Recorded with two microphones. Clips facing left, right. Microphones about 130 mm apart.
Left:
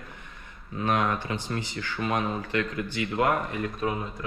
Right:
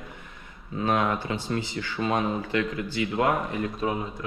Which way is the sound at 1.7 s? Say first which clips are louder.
Right 1 dB; 25° right (ahead or behind).